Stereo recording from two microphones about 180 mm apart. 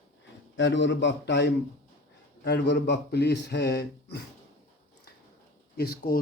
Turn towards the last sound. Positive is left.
turn(degrees=60)  # may be behind; listen again after turning